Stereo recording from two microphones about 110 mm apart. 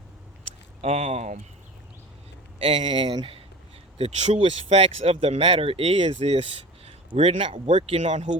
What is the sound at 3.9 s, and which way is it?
Speech, 75° right (ahead or behind).